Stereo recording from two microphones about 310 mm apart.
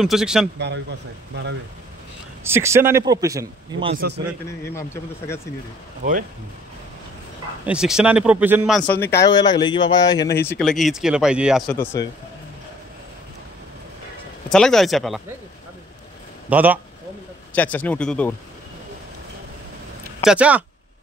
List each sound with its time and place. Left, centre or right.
0.0 s speech: centre
1.3 s speech: right
2.4 s speech: centre
3.9 s a man's voice: right
4.7 s speech: centre
7.6 s speech: centre
11.7 s speech: centre
14.5 s speech: centre
16.4 s speech: centre
20.2 s speech: centre